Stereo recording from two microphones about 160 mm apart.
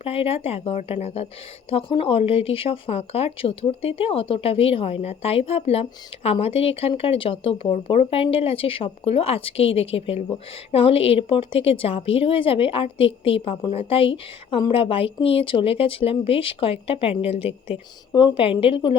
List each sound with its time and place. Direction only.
0.0 s speech: 35° left (ahead or behind)